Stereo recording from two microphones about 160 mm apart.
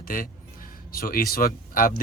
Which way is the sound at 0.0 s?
60° left (ahead or behind).